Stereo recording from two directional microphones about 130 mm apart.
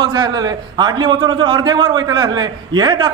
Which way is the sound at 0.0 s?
35° right (ahead or behind).